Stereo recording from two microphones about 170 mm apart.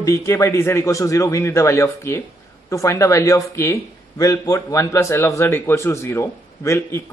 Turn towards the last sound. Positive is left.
turn(degrees=15)  # may be behind; listen again after turning